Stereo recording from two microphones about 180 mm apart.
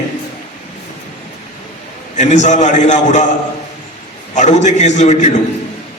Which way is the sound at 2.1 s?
40° left (ahead or behind).